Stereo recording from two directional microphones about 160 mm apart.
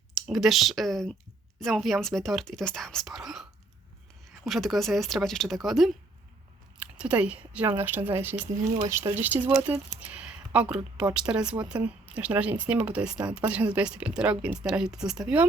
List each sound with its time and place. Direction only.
0.1 s speech: centre (ahead or behind)
4.4 s speech: centre (ahead or behind)
7.0 s a woman's voice: 5° right (ahead or behind)